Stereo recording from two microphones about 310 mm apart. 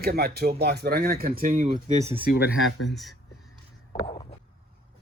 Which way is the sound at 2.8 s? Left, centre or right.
Centre.